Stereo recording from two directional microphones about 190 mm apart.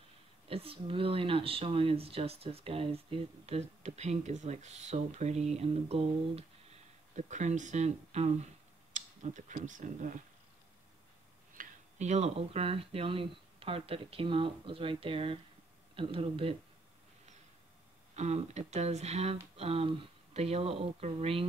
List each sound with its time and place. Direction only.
0.5 s speech: 30° right (ahead or behind)
11.5 s speech: 40° right (ahead or behind)
18.1 s speech: 35° right (ahead or behind)